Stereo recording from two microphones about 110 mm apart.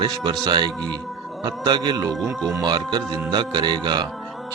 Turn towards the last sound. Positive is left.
turn(degrees=-40)  # may be behind; listen again after turning